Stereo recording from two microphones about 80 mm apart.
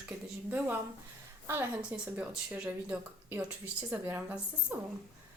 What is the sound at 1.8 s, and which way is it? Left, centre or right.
A woman's voice, centre.